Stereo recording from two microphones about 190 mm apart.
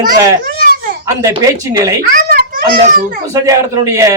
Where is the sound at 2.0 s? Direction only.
50° right (ahead or behind).